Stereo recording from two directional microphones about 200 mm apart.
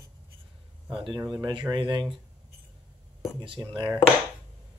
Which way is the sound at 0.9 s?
25° right (ahead or behind).